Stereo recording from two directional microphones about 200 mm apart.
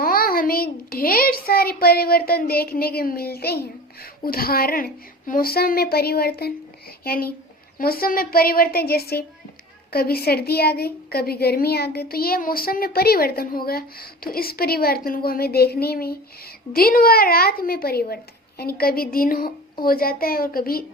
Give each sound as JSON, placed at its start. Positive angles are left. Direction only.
{"t": 0.0, "sound": "a child's voice", "side_deg": 45}